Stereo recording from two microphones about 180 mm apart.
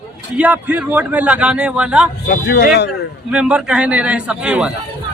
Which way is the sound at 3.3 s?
5° right (ahead or behind).